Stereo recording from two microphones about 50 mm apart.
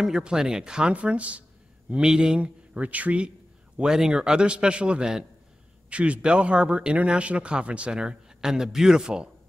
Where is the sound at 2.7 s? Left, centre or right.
Right.